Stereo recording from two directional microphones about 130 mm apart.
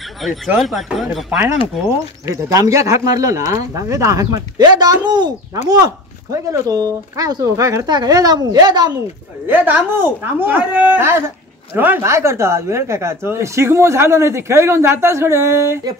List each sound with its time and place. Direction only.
0.6 s speech: centre (ahead or behind)
2.2 s a woman's voice: 25° right (ahead or behind)
9.5 s a woman's voice: 15° right (ahead or behind)